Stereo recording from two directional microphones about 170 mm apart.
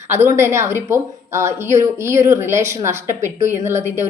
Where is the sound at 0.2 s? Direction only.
15° right (ahead or behind).